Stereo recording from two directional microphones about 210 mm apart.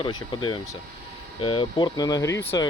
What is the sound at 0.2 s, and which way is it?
Speech, 20° left (ahead or behind).